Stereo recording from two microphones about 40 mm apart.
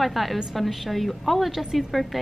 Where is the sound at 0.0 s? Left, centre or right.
Centre.